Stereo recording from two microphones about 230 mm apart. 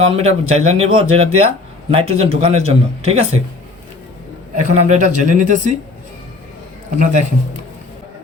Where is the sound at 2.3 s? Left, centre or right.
Right.